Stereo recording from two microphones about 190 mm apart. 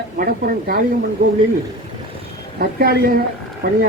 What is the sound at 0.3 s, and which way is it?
Speech, 50° right (ahead or behind).